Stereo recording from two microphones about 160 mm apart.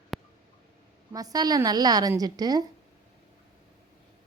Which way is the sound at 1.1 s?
25° right (ahead or behind).